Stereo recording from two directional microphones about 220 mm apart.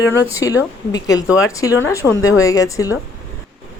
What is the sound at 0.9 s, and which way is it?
Speech, 15° left (ahead or behind).